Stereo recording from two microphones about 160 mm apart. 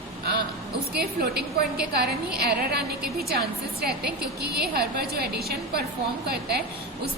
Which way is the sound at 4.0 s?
85° right.